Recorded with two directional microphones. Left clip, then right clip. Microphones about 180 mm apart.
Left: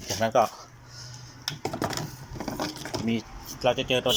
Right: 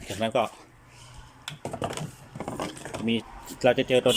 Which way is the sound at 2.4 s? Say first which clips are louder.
Left 1 dB; centre (ahead or behind).